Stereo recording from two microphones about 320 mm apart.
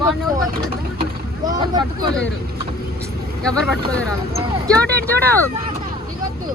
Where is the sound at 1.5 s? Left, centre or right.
Centre.